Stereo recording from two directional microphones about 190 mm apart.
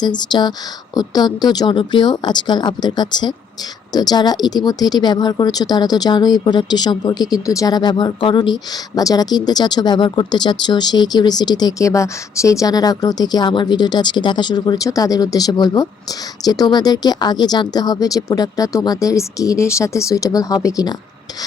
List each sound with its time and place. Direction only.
0.0 s speech: 20° left (ahead or behind)